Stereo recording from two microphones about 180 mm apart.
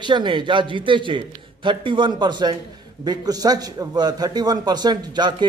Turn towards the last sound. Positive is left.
turn(degrees=-25)  # may be behind; listen again after turning